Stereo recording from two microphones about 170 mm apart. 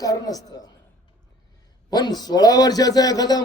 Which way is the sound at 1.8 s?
25° left (ahead or behind).